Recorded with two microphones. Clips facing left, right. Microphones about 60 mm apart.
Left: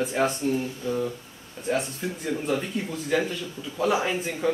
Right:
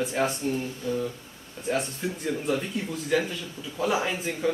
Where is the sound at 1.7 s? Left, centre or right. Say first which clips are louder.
Left 1 dB; centre.